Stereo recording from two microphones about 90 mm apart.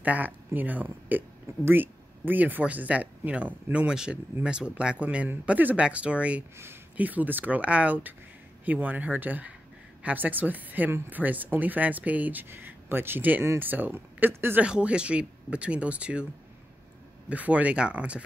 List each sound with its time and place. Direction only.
0.0 s a woman's voice: 15° right (ahead or behind)
17.3 s speech: 15° right (ahead or behind)